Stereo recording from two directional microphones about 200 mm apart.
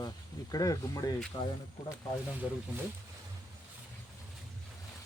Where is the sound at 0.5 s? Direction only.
20° left (ahead or behind).